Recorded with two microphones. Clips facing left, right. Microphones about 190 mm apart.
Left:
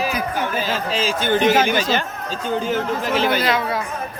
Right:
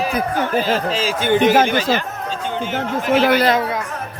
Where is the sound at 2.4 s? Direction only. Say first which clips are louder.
Left 3 dB; 40° left (ahead or behind).